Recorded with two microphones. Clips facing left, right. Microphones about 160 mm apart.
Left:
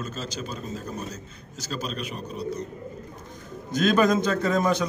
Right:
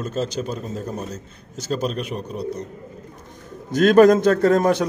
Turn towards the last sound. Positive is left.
turn(degrees=-65)  # may be behind; listen again after turning